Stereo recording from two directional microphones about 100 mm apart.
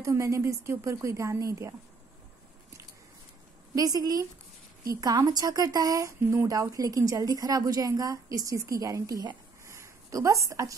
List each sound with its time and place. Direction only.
0.0 s a woman's voice: 30° right (ahead or behind)
3.7 s a woman's voice: 40° right (ahead or behind)
9.7 s a sound: 30° right (ahead or behind)